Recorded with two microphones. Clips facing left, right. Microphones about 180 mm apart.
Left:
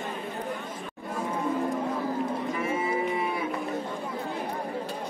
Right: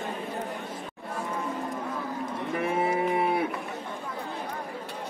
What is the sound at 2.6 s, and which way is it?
Cattle, 60° right (ahead or behind).